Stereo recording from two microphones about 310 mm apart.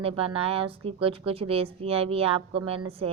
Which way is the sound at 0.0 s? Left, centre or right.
Centre.